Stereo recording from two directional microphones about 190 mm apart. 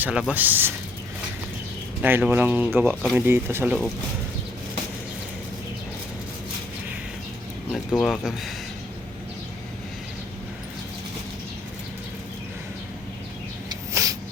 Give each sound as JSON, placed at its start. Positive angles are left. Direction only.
{"t": 0.0, "sound": "speech", "side_deg": -5}
{"t": 2.0, "sound": "speech", "side_deg": -10}
{"t": 7.7, "sound": "speech", "side_deg": 5}
{"t": 13.7, "sound": "a sound", "side_deg": -15}